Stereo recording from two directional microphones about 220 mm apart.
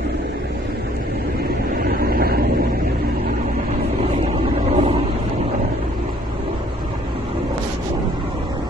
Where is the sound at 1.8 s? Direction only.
45° right (ahead or behind).